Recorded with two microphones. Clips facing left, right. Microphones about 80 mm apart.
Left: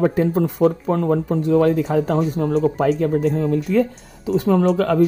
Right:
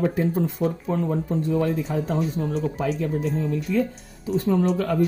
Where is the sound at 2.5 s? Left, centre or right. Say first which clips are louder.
Left 8 dB; left.